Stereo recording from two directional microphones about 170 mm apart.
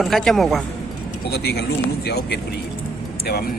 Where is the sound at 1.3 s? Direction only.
75° left (ahead or behind).